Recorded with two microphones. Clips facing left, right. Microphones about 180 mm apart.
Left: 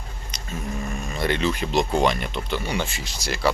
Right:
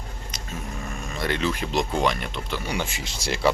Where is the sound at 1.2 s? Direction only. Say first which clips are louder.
Left 2 dB; centre (ahead or behind).